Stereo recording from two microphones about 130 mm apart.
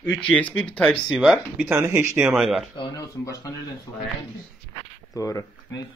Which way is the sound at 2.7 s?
30° left (ahead or behind).